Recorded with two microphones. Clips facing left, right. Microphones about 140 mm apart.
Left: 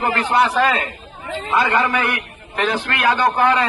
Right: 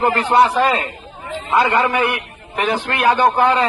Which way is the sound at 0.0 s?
30° right (ahead or behind).